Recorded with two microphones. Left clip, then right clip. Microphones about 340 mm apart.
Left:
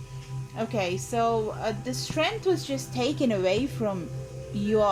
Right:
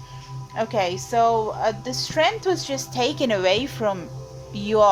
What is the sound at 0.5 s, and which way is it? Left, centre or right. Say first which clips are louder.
A woman's voice: right 6 dB; right.